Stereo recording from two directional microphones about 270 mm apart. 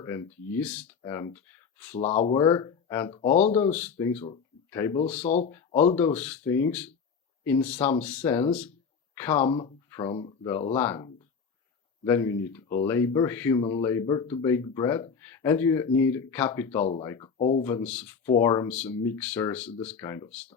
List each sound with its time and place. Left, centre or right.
0.0 s speech: centre
2.0 s speech: left
3.2 s speech: left
3.6 s speech: centre
4.3 s a sound: centre
5.2 s speech: left
5.5 s speech: centre
9.5 s speech: centre
17.6 s speech: centre